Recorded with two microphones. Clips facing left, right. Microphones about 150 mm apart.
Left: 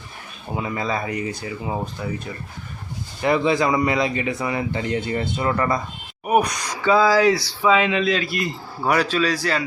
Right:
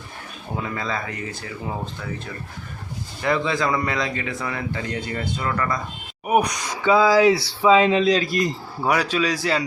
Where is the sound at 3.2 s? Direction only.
20° left (ahead or behind).